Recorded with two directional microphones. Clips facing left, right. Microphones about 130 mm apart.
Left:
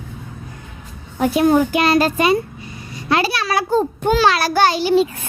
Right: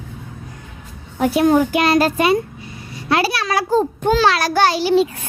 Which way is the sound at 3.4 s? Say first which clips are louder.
Even; centre (ahead or behind).